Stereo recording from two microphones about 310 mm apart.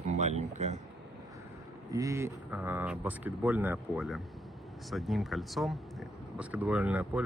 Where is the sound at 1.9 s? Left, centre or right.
Centre.